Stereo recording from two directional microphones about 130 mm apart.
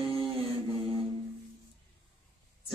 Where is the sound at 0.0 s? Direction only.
40° right (ahead or behind).